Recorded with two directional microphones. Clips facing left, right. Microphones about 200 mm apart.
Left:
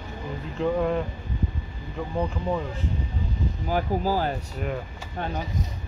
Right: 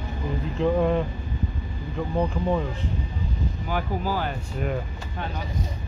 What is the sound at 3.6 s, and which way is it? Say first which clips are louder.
Speech: left 3 dB; 40° left (ahead or behind).